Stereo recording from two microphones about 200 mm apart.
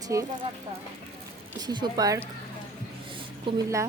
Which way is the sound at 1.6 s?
20° right (ahead or behind).